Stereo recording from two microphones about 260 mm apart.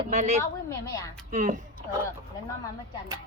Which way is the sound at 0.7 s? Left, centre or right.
Centre.